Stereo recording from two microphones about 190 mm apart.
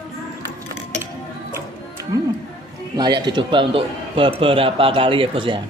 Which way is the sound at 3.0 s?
25° right (ahead or behind).